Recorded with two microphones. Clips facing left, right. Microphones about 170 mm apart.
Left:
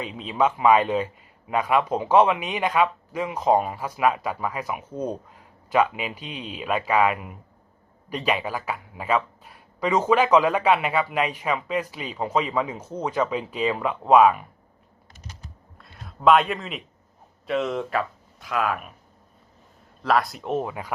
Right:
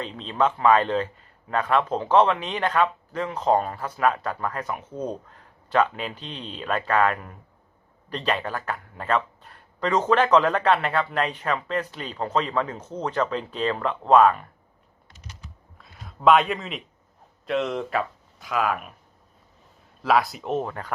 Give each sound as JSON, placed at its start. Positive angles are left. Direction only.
{"t": 0.0, "sound": "speech", "side_deg": 10}
{"t": 15.8, "sound": "a man's voice", "side_deg": 0}
{"t": 20.0, "sound": "speech", "side_deg": 0}